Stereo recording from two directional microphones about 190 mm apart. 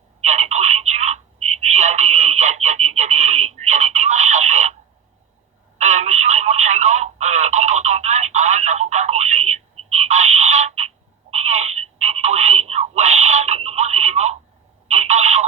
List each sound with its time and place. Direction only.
0.2 s telephone: 35° right (ahead or behind)
5.8 s telephone: 40° right (ahead or behind)